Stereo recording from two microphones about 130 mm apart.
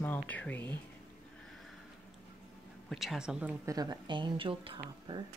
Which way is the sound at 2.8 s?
Centre (ahead or behind).